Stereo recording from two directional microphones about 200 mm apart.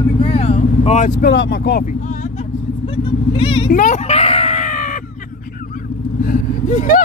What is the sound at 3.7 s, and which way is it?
Screaming, 40° left (ahead or behind).